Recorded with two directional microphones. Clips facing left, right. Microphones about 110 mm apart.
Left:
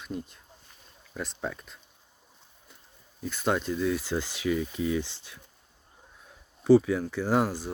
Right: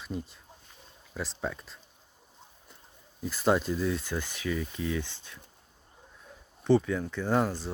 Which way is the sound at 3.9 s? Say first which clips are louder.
Left 3 dB; 15° left (ahead or behind).